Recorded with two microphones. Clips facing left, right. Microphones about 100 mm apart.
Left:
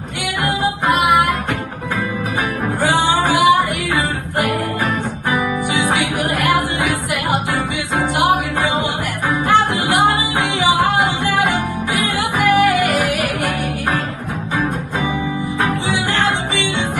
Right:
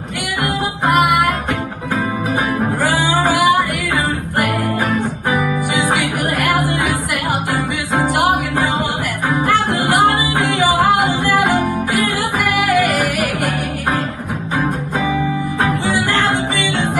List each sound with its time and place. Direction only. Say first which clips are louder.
0.8 s music: right 1 dB; 60° right (ahead or behind)
3.3 s music: left 1 dB; 60° left (ahead or behind)
9.5 s music: left 2 dB; 55° right (ahead or behind)
12.2 s music: left 3 dB; 60° left (ahead or behind)